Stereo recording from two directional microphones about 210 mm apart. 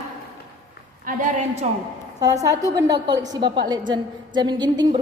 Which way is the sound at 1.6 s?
30° right (ahead or behind).